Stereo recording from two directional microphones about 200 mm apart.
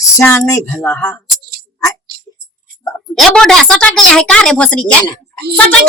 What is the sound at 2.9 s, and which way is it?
A woman's voice, centre (ahead or behind).